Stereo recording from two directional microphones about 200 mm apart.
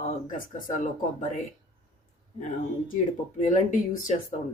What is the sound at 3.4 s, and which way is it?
Speech, 40° left (ahead or behind).